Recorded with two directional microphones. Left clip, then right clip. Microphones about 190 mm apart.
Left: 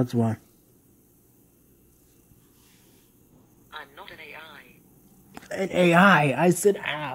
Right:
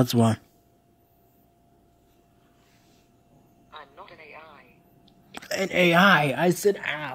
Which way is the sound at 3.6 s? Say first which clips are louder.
Left 3 dB; 30° left (ahead or behind).